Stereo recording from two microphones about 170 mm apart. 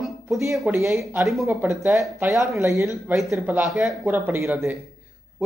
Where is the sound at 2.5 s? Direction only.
15° right (ahead or behind).